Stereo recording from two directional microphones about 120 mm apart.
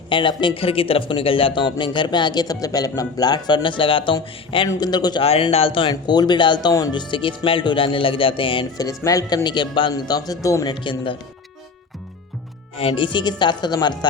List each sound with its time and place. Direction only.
0.1 s speech: 40° left (ahead or behind)
5.2 s speech: 55° left (ahead or behind)
9.0 s speech: 30° left (ahead or behind)
10.8 s speech: 45° left (ahead or behind)
12.7 s speech: 50° left (ahead or behind)